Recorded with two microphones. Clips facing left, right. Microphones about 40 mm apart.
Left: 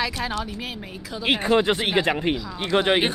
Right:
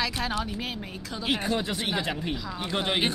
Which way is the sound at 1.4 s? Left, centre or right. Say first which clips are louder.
Left 8 dB; left.